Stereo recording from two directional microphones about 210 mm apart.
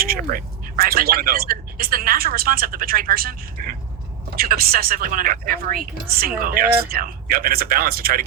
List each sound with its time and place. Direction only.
0.0 s a woman's voice: 45° right (ahead or behind)